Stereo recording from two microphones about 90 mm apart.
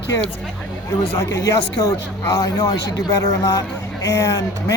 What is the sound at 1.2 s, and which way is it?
Speech, 30° left (ahead or behind).